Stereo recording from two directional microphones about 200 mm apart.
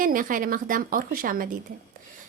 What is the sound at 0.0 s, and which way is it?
A woman's voice, 45° right (ahead or behind).